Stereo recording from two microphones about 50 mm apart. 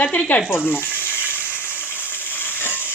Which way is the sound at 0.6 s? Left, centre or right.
Left.